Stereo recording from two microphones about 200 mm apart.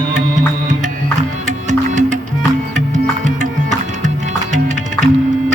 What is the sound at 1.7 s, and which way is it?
Music, 40° right (ahead or behind).